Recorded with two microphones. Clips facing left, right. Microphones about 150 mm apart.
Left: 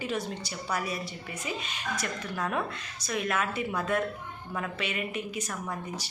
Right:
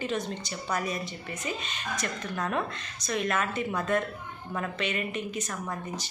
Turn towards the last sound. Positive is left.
turn(degrees=10)  # may be behind; listen again after turning